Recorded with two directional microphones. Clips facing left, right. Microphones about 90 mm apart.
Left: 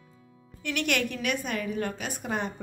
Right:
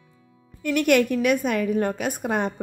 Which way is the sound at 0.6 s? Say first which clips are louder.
Right 9 dB; 45° right (ahead or behind).